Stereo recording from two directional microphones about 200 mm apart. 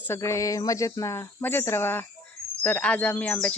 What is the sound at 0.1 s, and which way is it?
Speech, 15° left (ahead or behind).